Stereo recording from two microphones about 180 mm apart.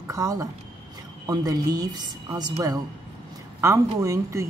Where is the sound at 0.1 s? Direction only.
20° right (ahead or behind).